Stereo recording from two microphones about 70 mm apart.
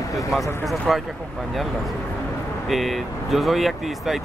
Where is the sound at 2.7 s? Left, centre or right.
Centre.